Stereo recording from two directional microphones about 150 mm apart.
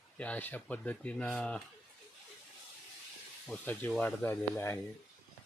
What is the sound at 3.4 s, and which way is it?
Speech, 10° left (ahead or behind).